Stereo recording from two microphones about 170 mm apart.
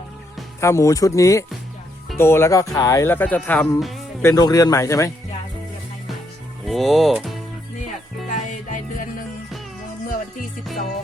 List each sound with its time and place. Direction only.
0.6 s speech: 15° left (ahead or behind); by 4.0 s centre (ahead or behind)
4.2 s speech: 20° left (ahead or behind)
6.7 s speech: centre (ahead or behind)
8.3 s music: 50° left (ahead or behind)